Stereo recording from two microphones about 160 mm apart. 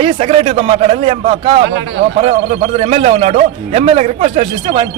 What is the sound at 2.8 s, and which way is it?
A man's voice, 40° right (ahead or behind).